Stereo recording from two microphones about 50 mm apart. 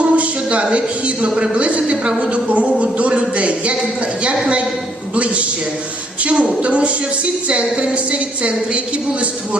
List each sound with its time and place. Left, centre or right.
0.0 s a sound: right
1.4 s a woman's voice: right
5.1 s a woman's voice: right